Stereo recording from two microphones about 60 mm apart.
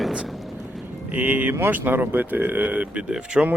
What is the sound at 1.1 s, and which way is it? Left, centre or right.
Speech, right.